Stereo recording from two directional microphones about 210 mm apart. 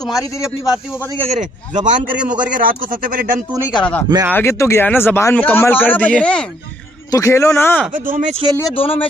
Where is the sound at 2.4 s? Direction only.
40° right (ahead or behind).